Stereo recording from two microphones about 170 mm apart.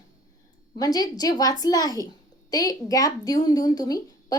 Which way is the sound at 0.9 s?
20° left (ahead or behind).